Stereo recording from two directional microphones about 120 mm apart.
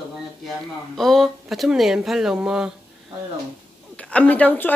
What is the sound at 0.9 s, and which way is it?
Speech, centre (ahead or behind).